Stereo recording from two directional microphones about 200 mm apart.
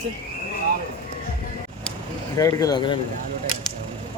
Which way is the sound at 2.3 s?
15° left (ahead or behind).